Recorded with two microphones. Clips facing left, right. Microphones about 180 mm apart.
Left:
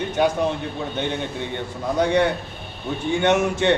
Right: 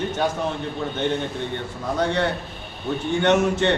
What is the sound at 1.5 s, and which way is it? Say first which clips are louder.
A man's voice: left 2 dB; 15° left (ahead or behind).